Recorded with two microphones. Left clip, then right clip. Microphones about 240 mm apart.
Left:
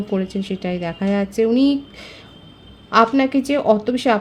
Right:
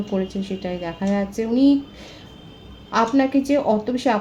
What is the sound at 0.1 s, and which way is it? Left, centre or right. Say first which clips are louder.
A woman's voice: left 2 dB; left.